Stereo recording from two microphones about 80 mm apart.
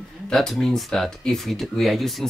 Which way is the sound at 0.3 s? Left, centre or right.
Centre.